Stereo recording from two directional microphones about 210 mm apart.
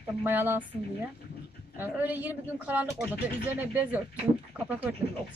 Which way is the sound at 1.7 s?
10° right (ahead or behind).